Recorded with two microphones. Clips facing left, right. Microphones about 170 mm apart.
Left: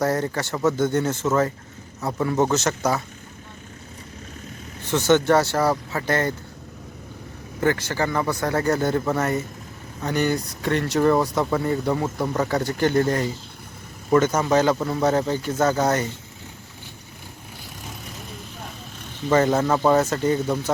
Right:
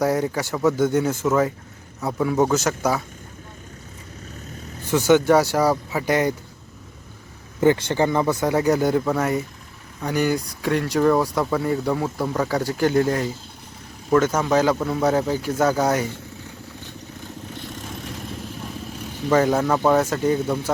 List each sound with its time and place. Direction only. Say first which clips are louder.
0.0 s speech: right 2 dB; 10° right (ahead or behind)
4.9 s speech: right 2 dB; 10° right (ahead or behind)
7.6 s speech: right 4 dB; 20° right (ahead or behind)
19.3 s speech: even; centre (ahead or behind)